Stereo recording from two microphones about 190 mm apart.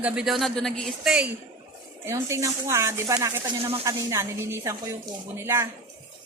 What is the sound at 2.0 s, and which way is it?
Speech, 15° right (ahead or behind).